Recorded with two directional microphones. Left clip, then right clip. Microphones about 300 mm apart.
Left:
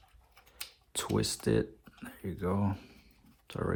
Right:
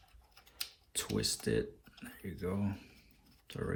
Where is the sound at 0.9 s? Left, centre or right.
Centre.